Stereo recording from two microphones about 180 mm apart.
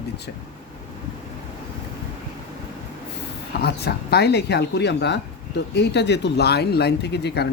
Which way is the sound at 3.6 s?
65° left (ahead or behind).